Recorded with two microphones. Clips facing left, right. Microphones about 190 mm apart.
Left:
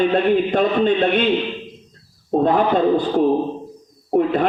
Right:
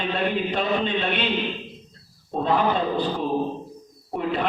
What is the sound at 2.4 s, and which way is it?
Speech, 50° left (ahead or behind).